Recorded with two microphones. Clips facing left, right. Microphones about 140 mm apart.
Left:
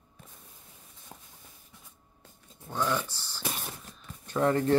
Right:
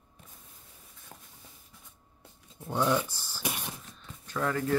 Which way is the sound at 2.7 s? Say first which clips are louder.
Right 3 dB; 15° right (ahead or behind).